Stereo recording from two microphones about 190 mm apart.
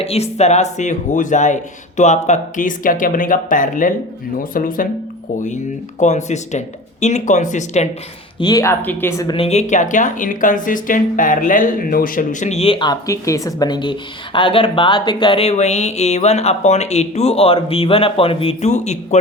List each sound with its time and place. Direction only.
0.0 s speech: 35° left (ahead or behind)
6.0 s speech: 40° left (ahead or behind)
8.4 s speech: 20° left (ahead or behind)
9.3 s speech: 30° left (ahead or behind)